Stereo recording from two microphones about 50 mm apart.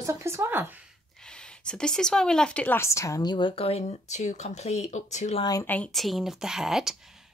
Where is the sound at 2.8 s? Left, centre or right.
Left.